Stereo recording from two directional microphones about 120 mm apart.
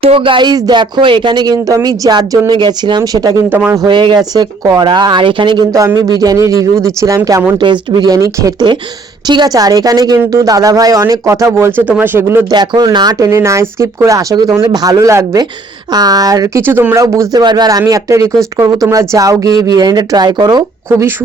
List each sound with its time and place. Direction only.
0.0 s speech: 50° right (ahead or behind); by 3.3 s 30° right (ahead or behind)
3.5 s speech: 15° right (ahead or behind)
3.8 s speech: 40° right (ahead or behind)
7.6 s speech: 40° right (ahead or behind); by 12.5 s 15° right (ahead or behind)
12.5 s speech: 35° right (ahead or behind)
13.1 s speech: 25° right (ahead or behind)
16.6 s speech: 20° right (ahead or behind); by 20.7 s 35° right (ahead or behind)